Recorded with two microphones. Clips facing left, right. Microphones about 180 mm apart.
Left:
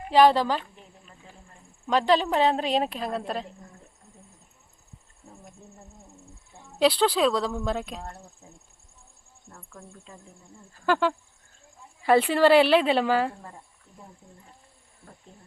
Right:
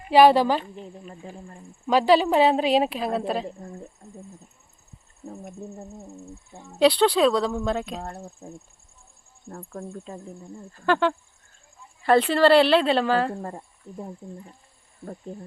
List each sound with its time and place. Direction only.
0.1 s speech: 10° right (ahead or behind)
1.0 s speech: 45° right (ahead or behind)
1.9 s speech: 5° right (ahead or behind)
4.0 s a sound: 40° right (ahead or behind)
5.2 s bird: 40° right (ahead or behind)
5.7 s speech: 40° right (ahead or behind)
6.6 s speech: centre (ahead or behind)
8.0 s speech: 35° right (ahead or behind)
9.5 s speech: 50° right (ahead or behind)
10.8 s a woman's voice: 5° left (ahead or behind)
13.4 s speech: 50° right (ahead or behind)